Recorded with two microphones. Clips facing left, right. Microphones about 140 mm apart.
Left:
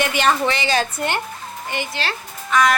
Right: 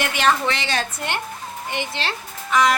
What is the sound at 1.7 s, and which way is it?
Speech, 25° right (ahead or behind).